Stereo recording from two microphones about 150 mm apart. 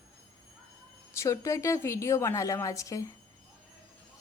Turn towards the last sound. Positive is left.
turn(degrees=20)  # may be behind; listen again after turning